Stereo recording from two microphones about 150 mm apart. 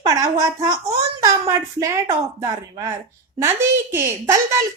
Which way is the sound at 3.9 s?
15° right (ahead or behind).